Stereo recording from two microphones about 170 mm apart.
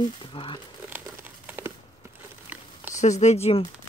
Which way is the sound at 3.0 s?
40° left (ahead or behind).